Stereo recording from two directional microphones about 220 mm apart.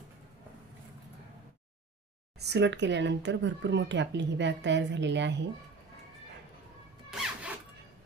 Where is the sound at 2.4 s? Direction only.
50° right (ahead or behind).